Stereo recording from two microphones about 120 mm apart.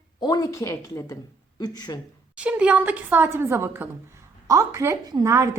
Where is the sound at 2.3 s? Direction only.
10° right (ahead or behind).